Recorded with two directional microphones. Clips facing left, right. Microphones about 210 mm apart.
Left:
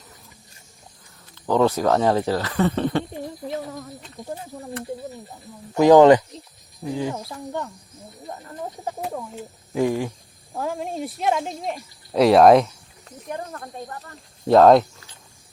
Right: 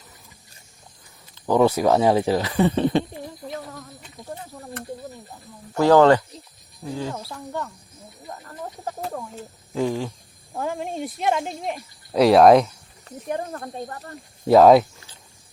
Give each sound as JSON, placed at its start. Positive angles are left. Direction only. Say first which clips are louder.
{"t": 1.4, "sound": "speech", "louder": "right 1 dB", "side_deg": -10}
{"t": 5.7, "sound": "speech", "louder": "left 3 dB", "side_deg": 15}
{"t": 10.5, "sound": "speech", "louder": "even", "side_deg": 0}
{"t": 13.2, "sound": "speech", "louder": "right 4 dB", "side_deg": -20}
{"t": 14.4, "sound": "speech", "louder": "even", "side_deg": -5}